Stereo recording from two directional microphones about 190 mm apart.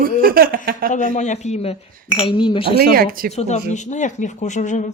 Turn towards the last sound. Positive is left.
turn(degrees=40)  # may be behind; listen again after turning